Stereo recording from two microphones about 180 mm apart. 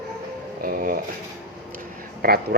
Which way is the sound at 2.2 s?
55° right (ahead or behind).